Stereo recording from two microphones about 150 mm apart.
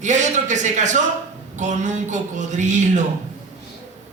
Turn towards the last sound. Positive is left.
turn(degrees=-55)  # may be behind; listen again after turning